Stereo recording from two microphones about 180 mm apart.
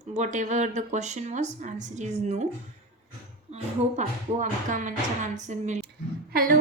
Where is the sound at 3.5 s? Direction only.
45° right (ahead or behind).